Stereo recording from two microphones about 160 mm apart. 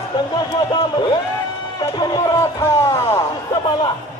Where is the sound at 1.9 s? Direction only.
25° left (ahead or behind).